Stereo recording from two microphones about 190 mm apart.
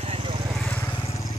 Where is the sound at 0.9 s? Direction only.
30° left (ahead or behind).